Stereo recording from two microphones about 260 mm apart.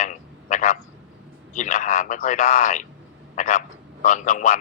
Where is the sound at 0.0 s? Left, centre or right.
Left.